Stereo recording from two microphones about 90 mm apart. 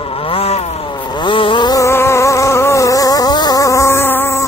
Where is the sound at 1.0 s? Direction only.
60° left (ahead or behind).